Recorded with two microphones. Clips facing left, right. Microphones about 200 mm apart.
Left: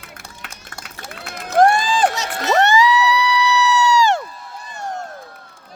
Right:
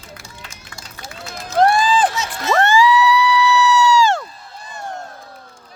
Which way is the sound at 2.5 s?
20° left (ahead or behind).